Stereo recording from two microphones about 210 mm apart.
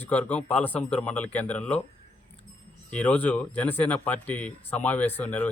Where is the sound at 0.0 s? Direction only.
5° left (ahead or behind).